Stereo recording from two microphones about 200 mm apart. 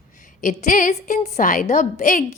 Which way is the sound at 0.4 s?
40° left (ahead or behind).